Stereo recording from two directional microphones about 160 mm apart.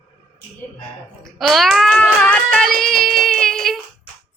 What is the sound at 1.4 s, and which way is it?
Child singing, centre (ahead or behind).